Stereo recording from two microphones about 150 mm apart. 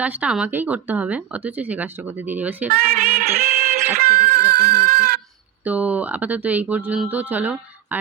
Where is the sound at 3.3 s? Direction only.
90° right.